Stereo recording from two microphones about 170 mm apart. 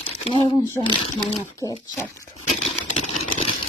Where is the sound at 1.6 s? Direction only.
20° left (ahead or behind).